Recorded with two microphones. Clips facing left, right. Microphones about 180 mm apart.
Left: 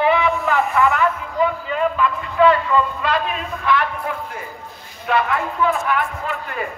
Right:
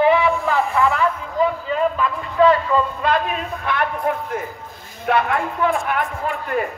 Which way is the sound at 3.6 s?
55° right (ahead or behind).